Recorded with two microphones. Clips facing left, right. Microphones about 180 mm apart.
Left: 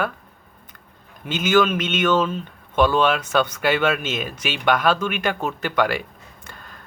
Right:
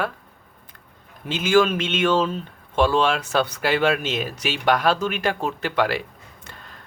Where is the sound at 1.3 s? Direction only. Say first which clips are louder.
Even; 30° right (ahead or behind).